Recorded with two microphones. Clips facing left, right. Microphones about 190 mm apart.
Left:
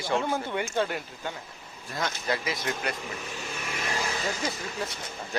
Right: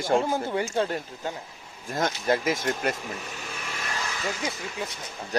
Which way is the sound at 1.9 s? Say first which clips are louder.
Right 5 dB; 50° right (ahead or behind).